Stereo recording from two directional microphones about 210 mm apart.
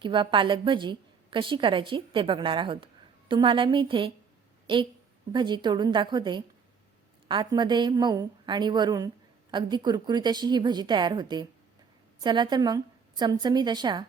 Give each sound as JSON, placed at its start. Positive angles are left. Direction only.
{"t": 0.0, "sound": "a woman's voice", "side_deg": -20}